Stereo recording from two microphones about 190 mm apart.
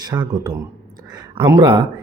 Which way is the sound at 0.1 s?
20° right (ahead or behind).